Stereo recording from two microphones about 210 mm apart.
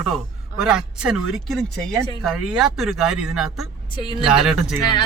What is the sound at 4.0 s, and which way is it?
Speech, 20° left (ahead or behind).